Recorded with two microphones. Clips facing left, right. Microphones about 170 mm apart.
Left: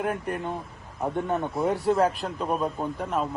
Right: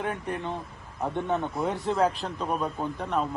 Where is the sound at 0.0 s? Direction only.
5° left (ahead or behind).